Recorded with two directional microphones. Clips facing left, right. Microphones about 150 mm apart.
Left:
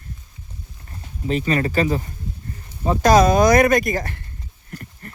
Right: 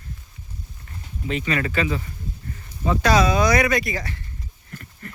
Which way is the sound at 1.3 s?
35° left (ahead or behind).